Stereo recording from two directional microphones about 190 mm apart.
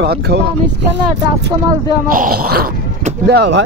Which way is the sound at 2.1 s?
50° right (ahead or behind).